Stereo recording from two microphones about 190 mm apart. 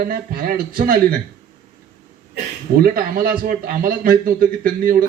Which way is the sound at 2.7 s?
50° right (ahead or behind).